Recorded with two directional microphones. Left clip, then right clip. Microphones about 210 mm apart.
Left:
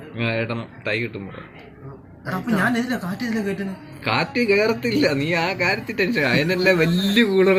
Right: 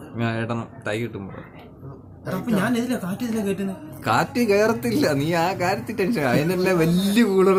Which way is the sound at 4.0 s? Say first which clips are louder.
Even; 15° right (ahead or behind).